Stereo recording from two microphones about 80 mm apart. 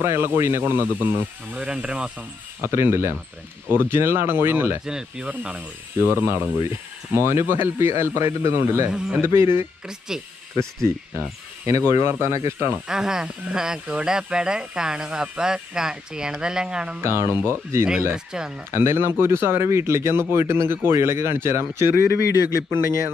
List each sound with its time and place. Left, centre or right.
0.0 s speech: right
1.6 s speech: centre
2.6 s speech: right
4.8 s speech: centre
5.9 s speech: right
9.8 s speech: centre
10.5 s speech: centre
11.6 s speech: right
12.7 s speech: centre
17.0 s speech: right
18.1 s speech: centre
18.7 s speech: right